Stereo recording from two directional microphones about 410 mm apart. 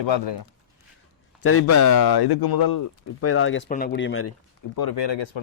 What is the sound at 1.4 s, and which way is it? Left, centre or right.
Speech, left.